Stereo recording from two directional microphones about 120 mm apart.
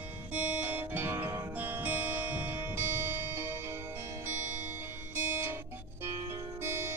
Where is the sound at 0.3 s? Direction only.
15° right (ahead or behind).